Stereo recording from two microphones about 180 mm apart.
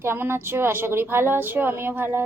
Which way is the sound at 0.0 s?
15° right (ahead or behind).